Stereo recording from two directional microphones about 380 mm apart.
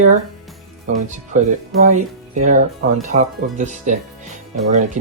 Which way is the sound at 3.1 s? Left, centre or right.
Centre.